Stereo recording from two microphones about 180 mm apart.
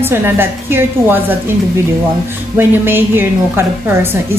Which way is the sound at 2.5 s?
10° right (ahead or behind).